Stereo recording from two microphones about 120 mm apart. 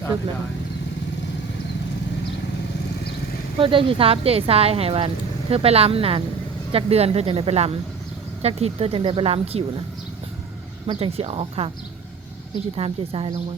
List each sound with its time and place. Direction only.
3.6 s speech: 45° right (ahead or behind)
10.8 s speech: 50° right (ahead or behind)
12.7 s speech: 50° right (ahead or behind)